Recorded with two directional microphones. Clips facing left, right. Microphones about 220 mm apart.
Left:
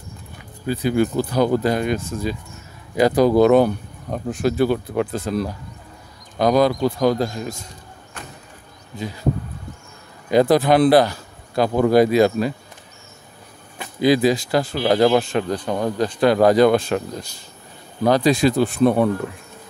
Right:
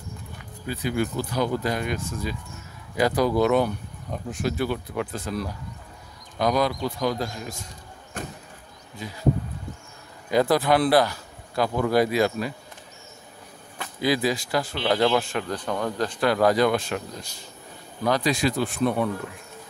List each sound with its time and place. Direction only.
0.7 s speech: 30° left (ahead or behind)
8.2 s vehicle: 45° right (ahead or behind)
10.3 s speech: 20° left (ahead or behind)
13.7 s speech: 20° left (ahead or behind)
14.9 s speech: 35° left (ahead or behind)
15.1 s speech: 20° left (ahead or behind); by 19.0 s 35° left (ahead or behind)